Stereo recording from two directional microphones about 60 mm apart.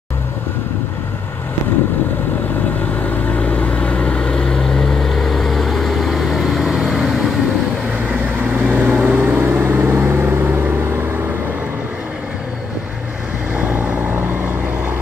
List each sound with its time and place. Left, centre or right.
3.0 s vehicle: left; by 7.3 s centre
8.6 s vehicle: right
13.6 s vehicle: right